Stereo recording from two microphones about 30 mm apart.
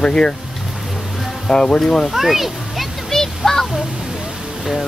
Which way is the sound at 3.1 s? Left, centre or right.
Centre.